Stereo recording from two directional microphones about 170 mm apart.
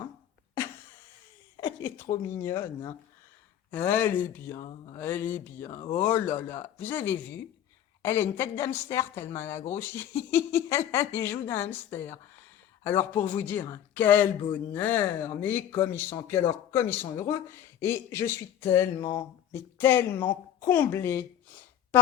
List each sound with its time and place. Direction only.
2.4 s speech: 15° left (ahead or behind)